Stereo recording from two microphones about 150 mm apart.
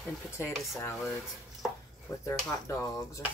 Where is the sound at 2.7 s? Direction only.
20° left (ahead or behind).